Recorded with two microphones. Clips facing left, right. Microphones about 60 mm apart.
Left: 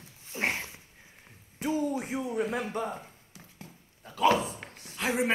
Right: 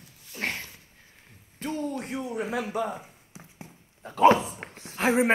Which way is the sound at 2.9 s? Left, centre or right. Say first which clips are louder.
Right 2 dB; centre.